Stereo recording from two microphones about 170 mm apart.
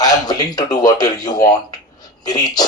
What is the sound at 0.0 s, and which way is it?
Speech, 25° left (ahead or behind).